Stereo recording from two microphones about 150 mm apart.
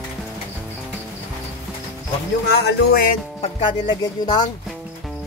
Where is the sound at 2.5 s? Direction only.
90° left.